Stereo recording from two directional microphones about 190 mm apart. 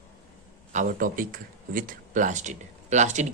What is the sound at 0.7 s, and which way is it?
Speech, 40° right (ahead or behind).